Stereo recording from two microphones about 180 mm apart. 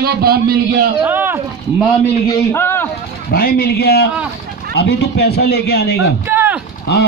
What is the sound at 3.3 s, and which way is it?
Speech, 55° left (ahead or behind).